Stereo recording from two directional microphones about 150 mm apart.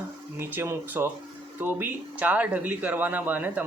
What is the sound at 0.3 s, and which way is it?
Speech, 15° right (ahead or behind).